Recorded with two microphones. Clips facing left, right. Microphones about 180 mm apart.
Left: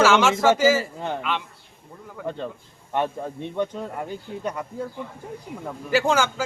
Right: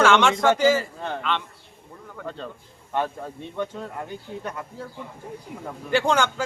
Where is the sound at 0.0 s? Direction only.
5° left (ahead or behind).